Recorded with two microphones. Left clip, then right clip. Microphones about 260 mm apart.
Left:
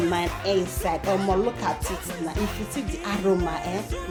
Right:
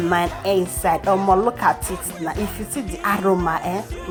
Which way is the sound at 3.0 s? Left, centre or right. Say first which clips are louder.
Right 7 dB; centre.